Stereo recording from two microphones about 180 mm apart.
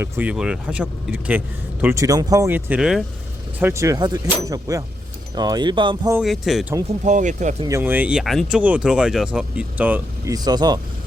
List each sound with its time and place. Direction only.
0.0 s speech: 10° right (ahead or behind)
3.6 s speech: 15° right (ahead or behind)
6.1 s speech: centre (ahead or behind)
6.8 s speech: 40° right (ahead or behind)
7.6 s speech: 15° right (ahead or behind)
10.3 s speech: 20° right (ahead or behind)